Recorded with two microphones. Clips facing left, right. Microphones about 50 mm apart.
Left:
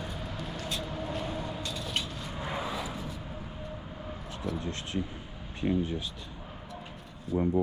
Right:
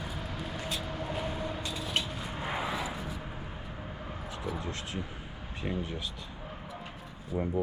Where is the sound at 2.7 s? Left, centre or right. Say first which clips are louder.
Right 1 dB; centre.